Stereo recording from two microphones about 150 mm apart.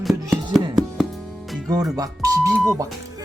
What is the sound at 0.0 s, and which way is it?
Music, centre (ahead or behind).